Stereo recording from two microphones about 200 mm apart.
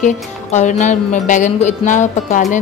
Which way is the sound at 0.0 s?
35° left (ahead or behind).